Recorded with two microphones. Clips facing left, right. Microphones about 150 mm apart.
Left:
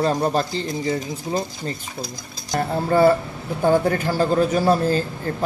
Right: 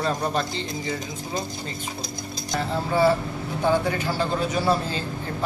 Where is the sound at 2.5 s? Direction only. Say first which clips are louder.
Left 5 dB; 50° left (ahead or behind).